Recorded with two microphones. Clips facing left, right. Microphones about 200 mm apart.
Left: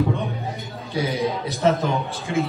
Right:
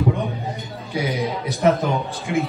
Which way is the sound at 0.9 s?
15° right (ahead or behind).